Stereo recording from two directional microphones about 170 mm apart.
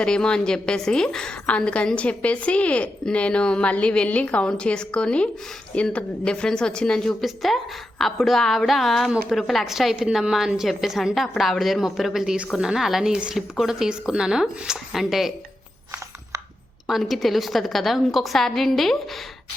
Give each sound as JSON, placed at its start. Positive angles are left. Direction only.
{"t": 0.0, "sound": "a woman's voice", "side_deg": 5}
{"t": 16.8, "sound": "a woman's voice", "side_deg": 0}